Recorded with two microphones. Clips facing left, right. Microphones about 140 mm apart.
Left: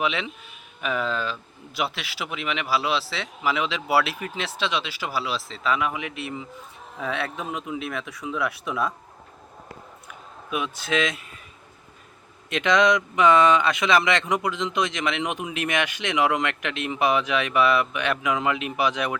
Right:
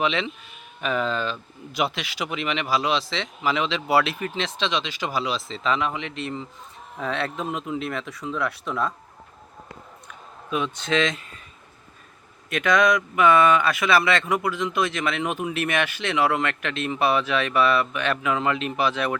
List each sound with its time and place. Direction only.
0.0 s speech: 10° left (ahead or behind)
10.1 s a sound: 10° left (ahead or behind)
12.5 s speech: 20° left (ahead or behind)